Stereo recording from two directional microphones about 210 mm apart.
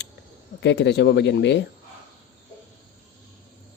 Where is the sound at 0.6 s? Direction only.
55° left (ahead or behind).